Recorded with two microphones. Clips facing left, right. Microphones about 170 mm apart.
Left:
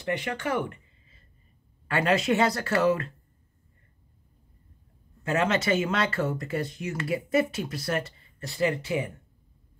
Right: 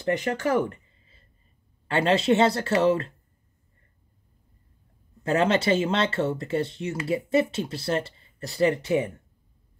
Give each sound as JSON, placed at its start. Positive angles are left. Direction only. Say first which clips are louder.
{"t": 0.0, "sound": "speech", "louder": "right 5 dB", "side_deg": -40}
{"t": 5.2, "sound": "speech", "louder": "right 3 dB", "side_deg": -35}